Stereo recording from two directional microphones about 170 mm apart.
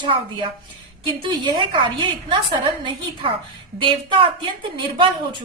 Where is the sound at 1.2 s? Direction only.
30° right (ahead or behind).